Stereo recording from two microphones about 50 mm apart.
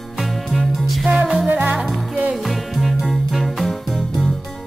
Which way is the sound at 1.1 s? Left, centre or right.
Centre.